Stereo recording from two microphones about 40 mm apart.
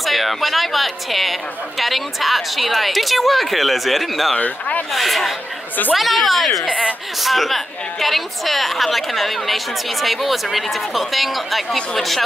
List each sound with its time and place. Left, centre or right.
0.0 s a woman's voice: centre
4.4 s speech: left
4.9 s a woman's voice: centre